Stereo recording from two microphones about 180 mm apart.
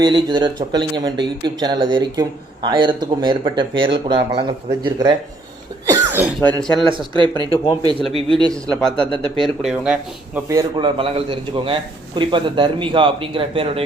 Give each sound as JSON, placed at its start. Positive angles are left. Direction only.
{"t": 0.0, "sound": "speech", "side_deg": -25}
{"t": 5.8, "sound": "cough", "side_deg": -20}
{"t": 6.9, "sound": "speech", "side_deg": -25}
{"t": 8.7, "sound": "speech", "side_deg": 5}
{"t": 10.5, "sound": "speech", "side_deg": -25}